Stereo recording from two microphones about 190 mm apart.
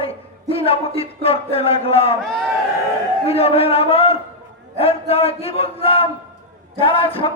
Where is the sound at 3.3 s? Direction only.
30° left (ahead or behind).